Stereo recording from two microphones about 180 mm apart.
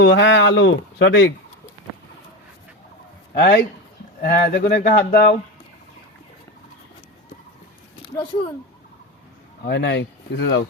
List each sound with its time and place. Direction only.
0.0 s speech: 75° left (ahead or behind)
3.3 s speech: 60° left (ahead or behind)
8.1 s speech: 25° left (ahead or behind)
9.6 s speech: 65° left (ahead or behind)